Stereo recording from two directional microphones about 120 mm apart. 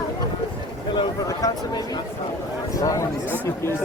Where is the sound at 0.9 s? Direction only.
35° left (ahead or behind).